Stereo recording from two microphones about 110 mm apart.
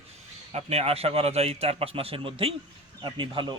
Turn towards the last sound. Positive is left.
turn(degrees=-45)  # may be behind; listen again after turning